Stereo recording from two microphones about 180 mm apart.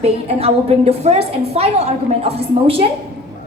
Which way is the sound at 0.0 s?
35° right (ahead or behind).